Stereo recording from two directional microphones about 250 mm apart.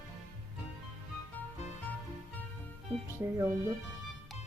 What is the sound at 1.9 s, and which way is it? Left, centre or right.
Music, centre.